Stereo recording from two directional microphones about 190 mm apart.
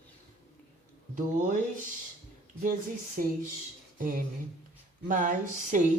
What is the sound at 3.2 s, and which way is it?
Speech, 45° right (ahead or behind).